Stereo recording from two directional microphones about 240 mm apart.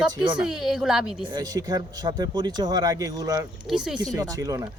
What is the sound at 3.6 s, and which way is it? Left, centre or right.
Speech, centre.